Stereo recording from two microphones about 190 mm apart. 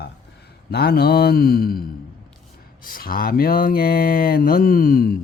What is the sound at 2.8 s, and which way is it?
Speech, 50° left (ahead or behind).